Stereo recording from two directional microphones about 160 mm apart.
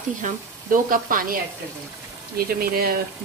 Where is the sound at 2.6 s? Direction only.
70° right (ahead or behind).